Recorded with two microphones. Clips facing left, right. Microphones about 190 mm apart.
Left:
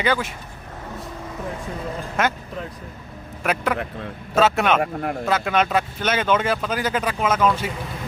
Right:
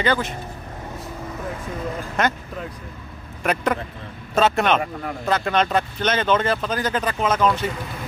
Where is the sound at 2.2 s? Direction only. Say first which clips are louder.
Even; 5° left (ahead or behind).